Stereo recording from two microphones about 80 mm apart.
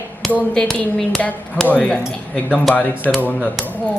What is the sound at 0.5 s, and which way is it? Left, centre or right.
Speech, centre.